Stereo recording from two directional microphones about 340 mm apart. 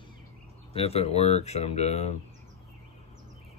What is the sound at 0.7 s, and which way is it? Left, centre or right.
Mantra, centre.